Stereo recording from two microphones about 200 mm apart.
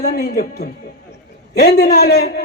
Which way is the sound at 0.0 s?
50° left (ahead or behind).